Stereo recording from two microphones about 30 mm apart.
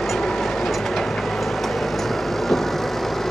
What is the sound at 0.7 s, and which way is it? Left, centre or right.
Vehicle, centre.